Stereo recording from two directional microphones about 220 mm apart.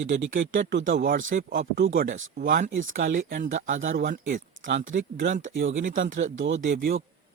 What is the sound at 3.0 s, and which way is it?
Speech, 60° right (ahead or behind).